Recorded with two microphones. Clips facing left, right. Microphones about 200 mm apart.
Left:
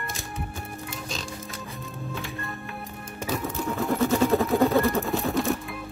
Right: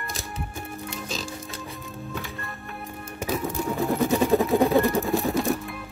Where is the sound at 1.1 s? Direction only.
Centre (ahead or behind).